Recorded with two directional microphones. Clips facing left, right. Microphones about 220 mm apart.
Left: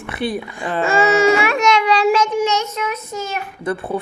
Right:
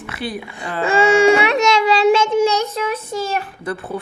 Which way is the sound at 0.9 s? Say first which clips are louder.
Right 2 dB; 30° right (ahead or behind).